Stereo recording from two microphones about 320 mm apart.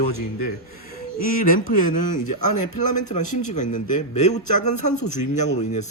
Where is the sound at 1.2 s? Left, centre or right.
Left.